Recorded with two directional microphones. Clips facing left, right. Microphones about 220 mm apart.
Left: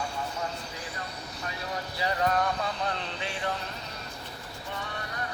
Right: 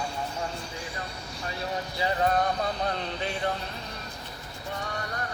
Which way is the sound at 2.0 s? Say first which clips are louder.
Right 2 dB; 35° right (ahead or behind).